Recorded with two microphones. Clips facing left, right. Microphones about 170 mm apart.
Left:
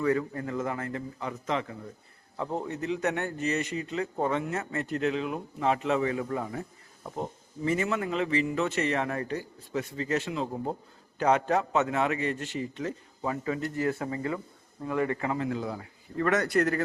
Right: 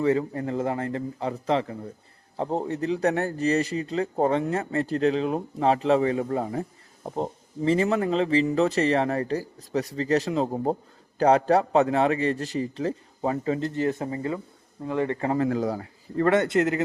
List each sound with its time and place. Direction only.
0.0 s speech: 25° right (ahead or behind)
15.3 s speech: 40° right (ahead or behind); by 16.8 s 20° right (ahead or behind)